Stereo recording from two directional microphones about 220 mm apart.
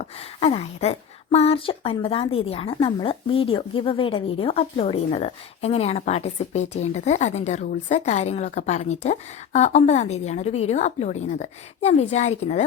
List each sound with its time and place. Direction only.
0.0 s a woman's voice: 25° left (ahead or behind)